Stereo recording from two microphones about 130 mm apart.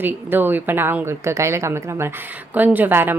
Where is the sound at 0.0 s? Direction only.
15° right (ahead or behind).